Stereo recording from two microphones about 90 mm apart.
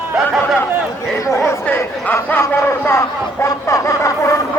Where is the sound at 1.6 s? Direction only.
20° left (ahead or behind).